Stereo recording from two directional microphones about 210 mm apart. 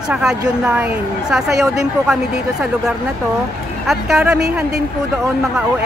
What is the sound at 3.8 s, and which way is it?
Speech, centre (ahead or behind).